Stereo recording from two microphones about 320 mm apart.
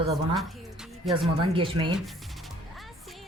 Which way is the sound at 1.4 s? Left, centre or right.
Centre.